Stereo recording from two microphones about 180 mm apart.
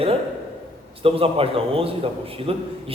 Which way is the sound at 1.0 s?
30° right (ahead or behind).